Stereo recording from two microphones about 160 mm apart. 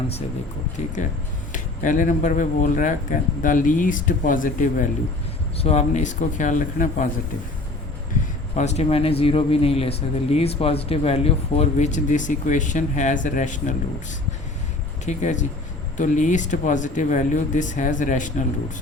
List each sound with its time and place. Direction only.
0.8 s speech: 50° left (ahead or behind)
5.5 s speech: 40° left (ahead or behind)
8.5 s speech: 45° left (ahead or behind)
15.0 s speech: 50° left (ahead or behind)